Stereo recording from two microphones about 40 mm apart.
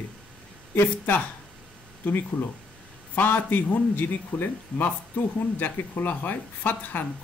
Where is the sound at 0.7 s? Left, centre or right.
Left.